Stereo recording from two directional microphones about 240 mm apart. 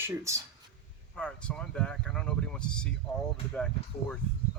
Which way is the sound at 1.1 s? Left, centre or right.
Centre.